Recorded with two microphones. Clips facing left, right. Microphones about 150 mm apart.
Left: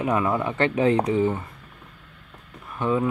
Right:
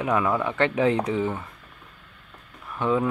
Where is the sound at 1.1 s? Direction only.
10° left (ahead or behind).